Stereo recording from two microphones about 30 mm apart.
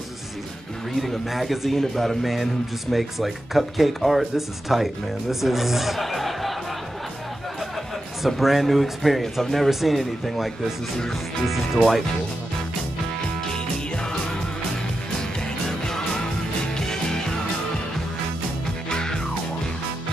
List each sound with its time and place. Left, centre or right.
1.0 s speech: centre
8.4 s speech: centre
9.7 s speech: centre
11.4 s speech: centre
15.6 s music: centre
18.9 s music: left